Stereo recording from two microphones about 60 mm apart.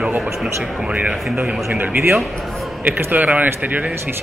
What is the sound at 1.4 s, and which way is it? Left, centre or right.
Speech, right.